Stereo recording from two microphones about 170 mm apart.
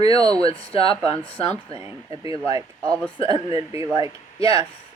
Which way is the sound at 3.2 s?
35° left (ahead or behind).